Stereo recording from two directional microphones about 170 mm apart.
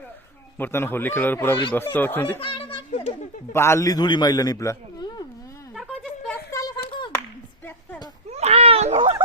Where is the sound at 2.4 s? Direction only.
35° left (ahead or behind).